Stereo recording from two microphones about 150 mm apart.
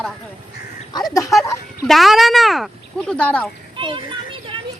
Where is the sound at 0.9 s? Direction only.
25° left (ahead or behind).